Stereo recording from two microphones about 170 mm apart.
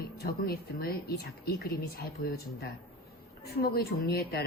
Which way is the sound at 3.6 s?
65° left (ahead or behind).